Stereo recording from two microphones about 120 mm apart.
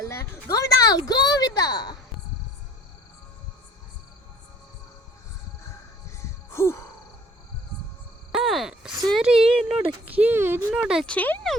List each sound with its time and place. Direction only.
0.1 s speech: 25° left (ahead or behind)
6.1 s a sound: 25° left (ahead or behind)
8.3 s speech: centre (ahead or behind); by 10.8 s 20° right (ahead or behind)
10.8 s speech: 5° right (ahead or behind)
11.0 s speech: 10° left (ahead or behind)